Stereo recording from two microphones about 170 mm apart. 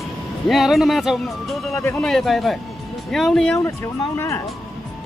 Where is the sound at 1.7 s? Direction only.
15° left (ahead or behind).